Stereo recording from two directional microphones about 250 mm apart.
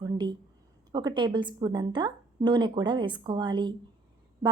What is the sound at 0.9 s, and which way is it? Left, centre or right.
A woman's voice, centre.